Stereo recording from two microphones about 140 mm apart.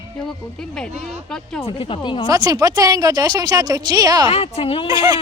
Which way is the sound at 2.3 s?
25° right (ahead or behind).